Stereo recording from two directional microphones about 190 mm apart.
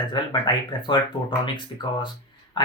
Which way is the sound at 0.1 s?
25° left (ahead or behind).